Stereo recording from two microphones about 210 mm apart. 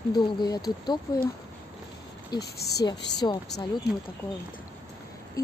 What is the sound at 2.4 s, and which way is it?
Speech, 50° left (ahead or behind).